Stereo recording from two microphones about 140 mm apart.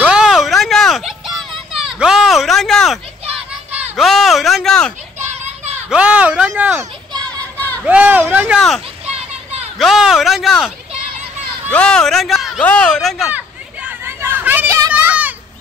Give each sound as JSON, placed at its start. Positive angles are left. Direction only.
{"t": 0.0, "sound": "a sound", "side_deg": -5}
{"t": 5.3, "sound": "children playing", "side_deg": -50}
{"t": 5.9, "sound": "speech", "side_deg": -10}
{"t": 7.5, "sound": "a sound", "side_deg": 15}
{"t": 7.8, "sound": "speech", "side_deg": -10}
{"t": 8.5, "sound": "speech", "side_deg": 0}
{"t": 11.7, "sound": "speech", "side_deg": 5}
{"t": 13.8, "sound": "hubbub", "side_deg": -15}
{"t": 14.9, "sound": "children playing", "side_deg": -10}